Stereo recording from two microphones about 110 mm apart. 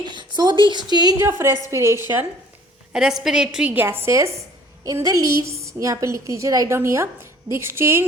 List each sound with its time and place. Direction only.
0.3 s a woman's voice: 45° right (ahead or behind)
1.3 s a woman's voice: 25° right (ahead or behind)
2.9 s a woman's voice: 5° right (ahead or behind)
3.8 s a woman's voice: 25° right (ahead or behind)